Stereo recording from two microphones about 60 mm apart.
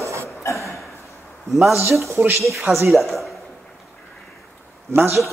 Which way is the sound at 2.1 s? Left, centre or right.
Right.